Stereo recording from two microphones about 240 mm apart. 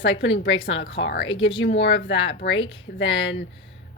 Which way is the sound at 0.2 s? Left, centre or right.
Left.